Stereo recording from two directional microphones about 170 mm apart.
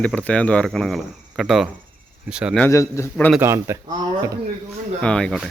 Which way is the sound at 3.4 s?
15° right (ahead or behind).